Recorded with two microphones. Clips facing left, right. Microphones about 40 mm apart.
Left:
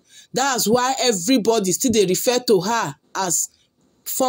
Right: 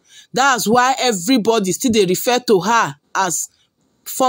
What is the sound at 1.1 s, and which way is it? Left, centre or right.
Speech, centre.